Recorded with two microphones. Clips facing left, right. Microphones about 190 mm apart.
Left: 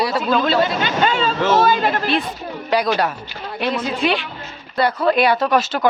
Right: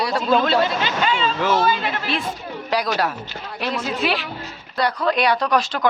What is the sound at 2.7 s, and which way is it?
A woman's voice, centre (ahead or behind).